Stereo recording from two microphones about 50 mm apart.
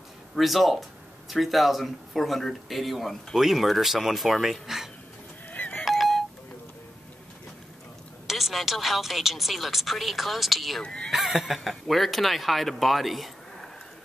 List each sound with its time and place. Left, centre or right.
0.4 s speech: centre
5.5 s doorbell: left
5.9 s doorbell: centre
8.3 s speech: centre
10.8 s speech: centre
11.1 s speech: centre